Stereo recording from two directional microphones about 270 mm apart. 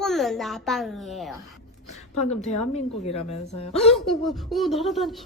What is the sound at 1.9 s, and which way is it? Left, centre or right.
A woman's voice, left.